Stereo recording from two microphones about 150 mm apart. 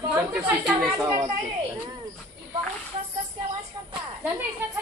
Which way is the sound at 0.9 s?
20° right (ahead or behind).